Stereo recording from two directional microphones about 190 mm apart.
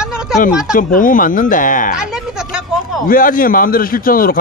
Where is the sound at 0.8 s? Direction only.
45° left (ahead or behind).